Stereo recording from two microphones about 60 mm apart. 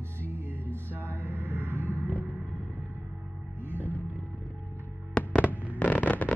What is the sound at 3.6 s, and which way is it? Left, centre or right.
Music, left.